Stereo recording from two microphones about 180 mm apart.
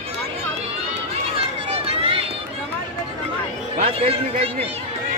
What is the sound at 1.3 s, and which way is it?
Run, 30° right (ahead or behind).